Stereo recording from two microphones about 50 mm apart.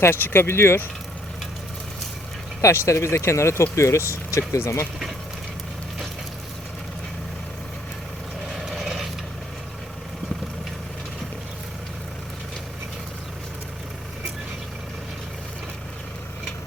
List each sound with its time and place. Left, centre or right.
0.0 s speech: left
2.6 s speech: left
8.4 s vehicle: centre